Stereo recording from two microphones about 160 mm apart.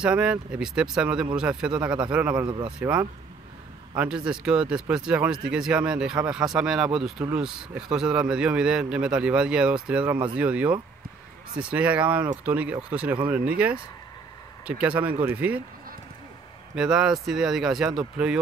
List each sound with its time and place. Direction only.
0.0 s speech: 5° right (ahead or behind)
2.4 s speech: 30° right (ahead or behind)
2.8 s a man's voice: 10° right (ahead or behind)
14.7 s speech: 10° right (ahead or behind)
16.7 s a man's voice: 5° right (ahead or behind)